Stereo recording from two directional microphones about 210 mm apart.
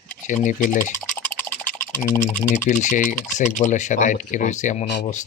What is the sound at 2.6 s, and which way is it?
Speech, 35° left (ahead or behind).